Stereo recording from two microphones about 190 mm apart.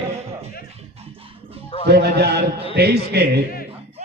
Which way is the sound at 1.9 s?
60° right (ahead or behind).